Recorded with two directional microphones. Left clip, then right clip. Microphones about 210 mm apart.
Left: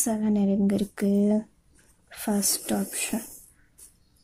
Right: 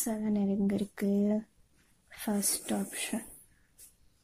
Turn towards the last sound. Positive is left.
turn(degrees=0)  # may be behind; listen again after turning